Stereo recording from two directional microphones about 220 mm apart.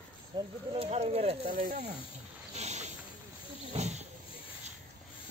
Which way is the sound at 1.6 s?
40° right (ahead or behind).